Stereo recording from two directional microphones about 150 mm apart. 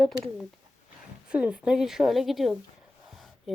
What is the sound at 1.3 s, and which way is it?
A woman's voice, 5° right (ahead or behind).